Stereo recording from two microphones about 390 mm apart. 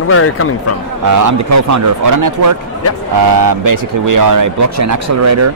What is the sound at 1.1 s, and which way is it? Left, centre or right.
A man's voice, right.